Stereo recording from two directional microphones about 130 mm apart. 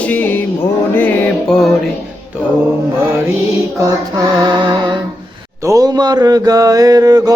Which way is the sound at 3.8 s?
25° right (ahead or behind).